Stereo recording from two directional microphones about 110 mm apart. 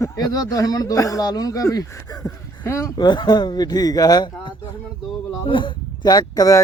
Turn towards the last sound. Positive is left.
turn(degrees=35)  # may be behind; listen again after turning